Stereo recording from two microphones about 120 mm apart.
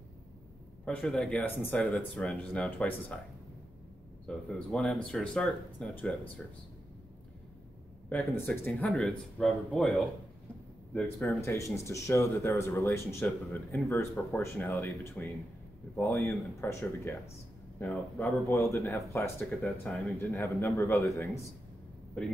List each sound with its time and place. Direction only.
0.8 s speech: 5° left (ahead or behind)
1.4 s speech: 15° left (ahead or behind)
4.3 s speech: 5° left (ahead or behind)
8.1 s speech: 15° left (ahead or behind)
11.2 s speech: 25° left (ahead or behind)
16.0 s speech: 25° left (ahead or behind)
17.8 s speech: 5° left (ahead or behind)
18.5 s speech: 25° left (ahead or behind)
19.6 s speech: 10° left (ahead or behind)
20.2 s speech: 25° left (ahead or behind)